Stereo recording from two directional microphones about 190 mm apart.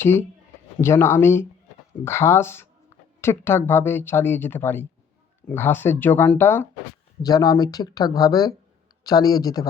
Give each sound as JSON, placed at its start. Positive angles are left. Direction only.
{"t": 0.0, "sound": "speech", "side_deg": 10}